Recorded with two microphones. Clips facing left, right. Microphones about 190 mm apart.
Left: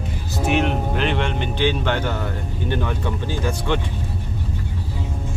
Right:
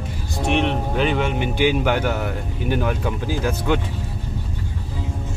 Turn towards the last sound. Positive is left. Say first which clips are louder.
# right 2 dB
turn(degrees=-5)  # may be behind; listen again after turning